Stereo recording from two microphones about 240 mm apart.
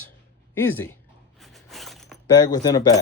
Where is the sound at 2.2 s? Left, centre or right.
Centre.